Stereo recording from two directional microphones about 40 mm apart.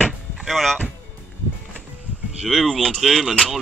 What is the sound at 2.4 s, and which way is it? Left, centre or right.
Speech, centre.